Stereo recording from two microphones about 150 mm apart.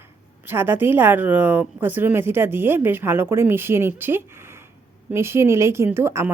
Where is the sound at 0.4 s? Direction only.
15° right (ahead or behind).